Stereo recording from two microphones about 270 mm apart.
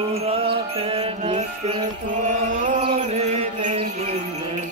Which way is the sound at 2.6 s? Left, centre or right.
Right.